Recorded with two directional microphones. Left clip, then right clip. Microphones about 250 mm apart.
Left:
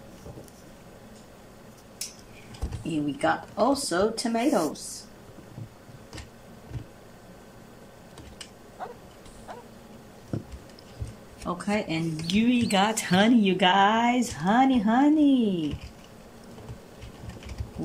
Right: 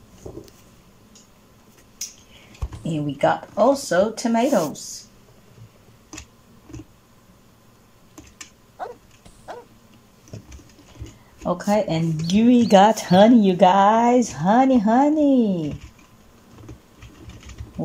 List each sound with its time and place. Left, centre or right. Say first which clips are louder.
3.2 s speech: right 7 dB; right
11.4 s speech: right 8 dB; right